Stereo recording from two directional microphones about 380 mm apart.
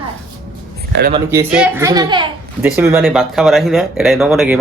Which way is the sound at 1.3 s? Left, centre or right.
Centre.